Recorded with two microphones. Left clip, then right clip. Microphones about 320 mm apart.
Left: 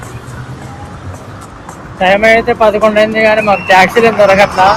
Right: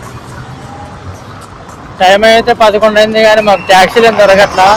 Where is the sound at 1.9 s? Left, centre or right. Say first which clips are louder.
Right 3 dB; centre.